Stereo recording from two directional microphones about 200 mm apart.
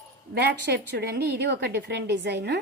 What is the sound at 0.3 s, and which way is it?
A woman's voice, 55° right (ahead or behind).